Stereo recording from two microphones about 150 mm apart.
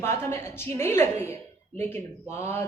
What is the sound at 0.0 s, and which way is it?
Speech, 15° left (ahead or behind).